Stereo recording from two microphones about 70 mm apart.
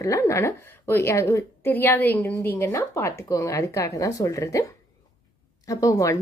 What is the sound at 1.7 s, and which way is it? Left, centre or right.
A woman's voice, left.